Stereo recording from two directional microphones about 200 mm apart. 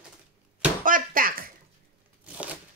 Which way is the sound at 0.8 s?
45° right (ahead or behind).